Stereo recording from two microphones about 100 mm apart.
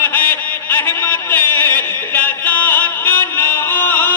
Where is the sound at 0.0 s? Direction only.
20° left (ahead or behind).